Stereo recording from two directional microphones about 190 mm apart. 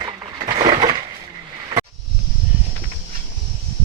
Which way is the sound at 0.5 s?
20° right (ahead or behind).